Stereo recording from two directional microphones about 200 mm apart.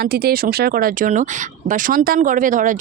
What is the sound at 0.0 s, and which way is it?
Speech, 50° right (ahead or behind).